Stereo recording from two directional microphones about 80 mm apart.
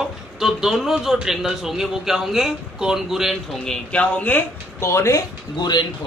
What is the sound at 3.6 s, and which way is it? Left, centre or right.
Speech, centre.